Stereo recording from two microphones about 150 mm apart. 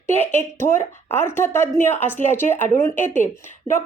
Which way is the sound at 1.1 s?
15° left (ahead or behind).